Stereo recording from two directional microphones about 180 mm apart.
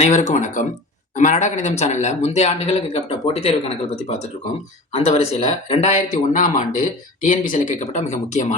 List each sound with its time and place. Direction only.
0.0 s speech: 40° left (ahead or behind)
4.9 s speech: 35° left (ahead or behind)